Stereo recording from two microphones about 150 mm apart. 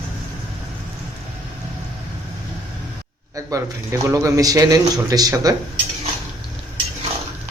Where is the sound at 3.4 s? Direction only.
20° right (ahead or behind).